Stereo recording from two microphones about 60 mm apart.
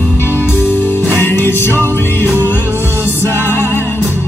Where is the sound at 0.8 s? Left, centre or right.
Left.